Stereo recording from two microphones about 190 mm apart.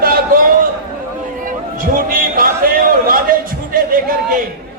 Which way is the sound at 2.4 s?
50° right (ahead or behind).